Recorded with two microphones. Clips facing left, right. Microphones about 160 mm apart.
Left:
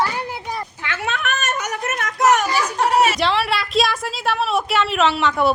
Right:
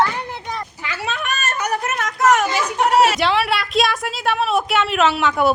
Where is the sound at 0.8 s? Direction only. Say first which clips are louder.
Left 2 dB; 70° left (ahead or behind).